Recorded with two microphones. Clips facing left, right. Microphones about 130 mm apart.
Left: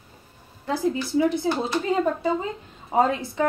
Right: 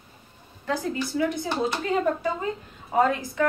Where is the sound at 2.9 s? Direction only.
20° left (ahead or behind).